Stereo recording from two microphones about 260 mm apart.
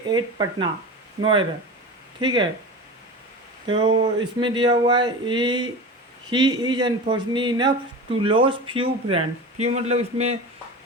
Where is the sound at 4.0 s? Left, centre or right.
Centre.